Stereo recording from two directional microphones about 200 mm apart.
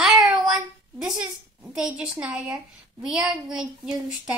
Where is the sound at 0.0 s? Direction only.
Centre (ahead or behind).